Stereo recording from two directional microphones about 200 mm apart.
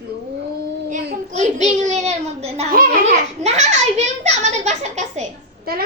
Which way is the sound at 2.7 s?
45° right (ahead or behind).